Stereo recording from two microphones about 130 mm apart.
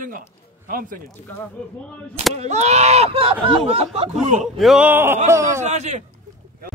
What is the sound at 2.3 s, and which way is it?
Speech, 60° right (ahead or behind).